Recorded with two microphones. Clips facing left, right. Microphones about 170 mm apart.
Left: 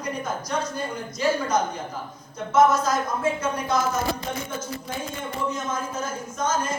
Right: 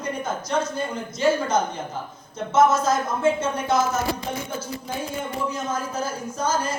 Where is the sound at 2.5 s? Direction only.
25° right (ahead or behind).